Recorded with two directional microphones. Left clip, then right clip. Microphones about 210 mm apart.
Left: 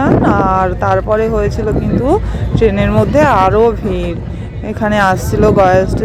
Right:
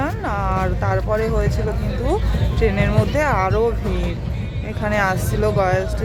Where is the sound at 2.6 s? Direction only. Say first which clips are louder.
Left 8 dB; 10° left (ahead or behind).